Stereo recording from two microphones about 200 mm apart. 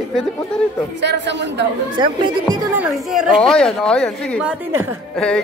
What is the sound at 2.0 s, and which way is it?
Speech, 20° right (ahead or behind).